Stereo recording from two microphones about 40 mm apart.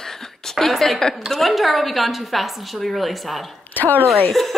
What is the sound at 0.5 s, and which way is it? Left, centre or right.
Speech, centre.